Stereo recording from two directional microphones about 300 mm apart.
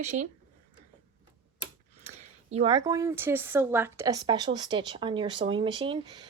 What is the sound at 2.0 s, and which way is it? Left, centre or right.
Speech, right.